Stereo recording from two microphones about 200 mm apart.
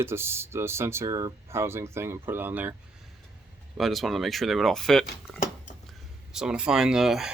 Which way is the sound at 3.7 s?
Centre (ahead or behind).